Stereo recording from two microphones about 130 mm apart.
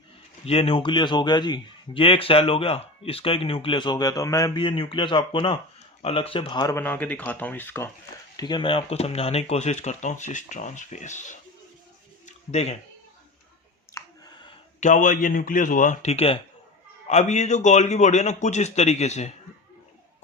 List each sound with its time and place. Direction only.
0.4 s a man's voice: 50° left (ahead or behind); by 4.6 s 30° left (ahead or behind)
4.6 s a man's voice: 40° left (ahead or behind)
6.7 s speech: 15° left (ahead or behind)
8.4 s speech: 35° left (ahead or behind); by 11.3 s 70° left (ahead or behind)
12.2 s a sound: 55° left (ahead or behind)
14.0 s a sound: 25° left (ahead or behind)
14.8 s speech: 80° left; by 16.4 s 50° left (ahead or behind)
17.1 s speech: 60° left (ahead or behind)